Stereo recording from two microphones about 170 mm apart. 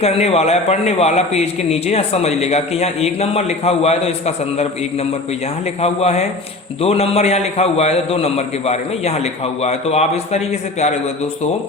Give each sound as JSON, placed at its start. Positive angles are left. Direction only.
{"t": 0.0, "sound": "a man's voice", "side_deg": 35}
{"t": 5.8, "sound": "a man's voice", "side_deg": 40}